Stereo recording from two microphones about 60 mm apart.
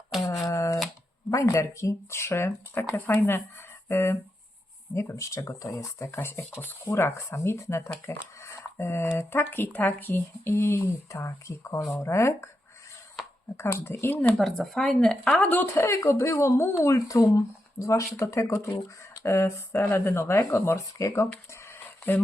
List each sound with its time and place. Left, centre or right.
0.4 s a sound: left
1.3 s speech: left
6.6 s speech: left
6.9 s speech: left
11.1 s speech: left
13.6 s speech: left
14.0 s speech: left
14.3 s speech: centre
15.4 s speech: left
15.8 s speech: left
21.8 s a sound: left